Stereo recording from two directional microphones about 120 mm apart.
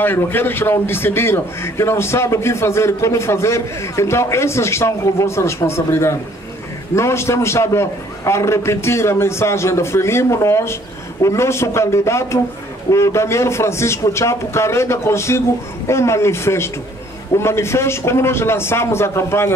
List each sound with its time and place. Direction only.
0.0 s a man's voice: 15° left (ahead or behind)